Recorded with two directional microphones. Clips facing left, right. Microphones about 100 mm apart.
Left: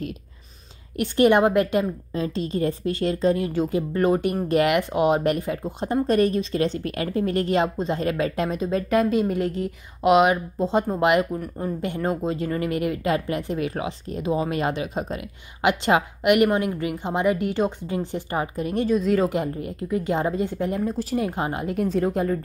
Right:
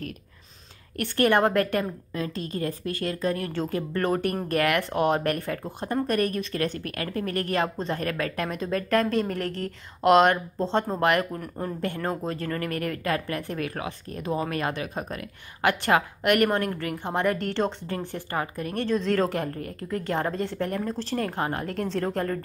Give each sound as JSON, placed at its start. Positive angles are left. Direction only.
{"t": 0.9, "sound": "a woman's voice", "side_deg": 15}
{"t": 11.3, "sound": "speech", "side_deg": 5}
{"t": 11.8, "sound": "a woman's voice", "side_deg": 15}